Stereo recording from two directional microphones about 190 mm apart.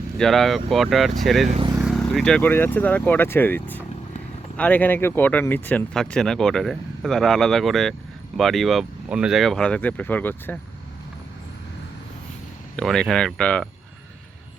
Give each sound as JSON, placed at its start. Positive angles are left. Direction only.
{"t": 0.2, "sound": "speech", "side_deg": 0}
{"t": 1.5, "sound": "speech", "side_deg": -30}
{"t": 1.8, "sound": "speech", "side_deg": 0}
{"t": 12.7, "sound": "speech", "side_deg": 5}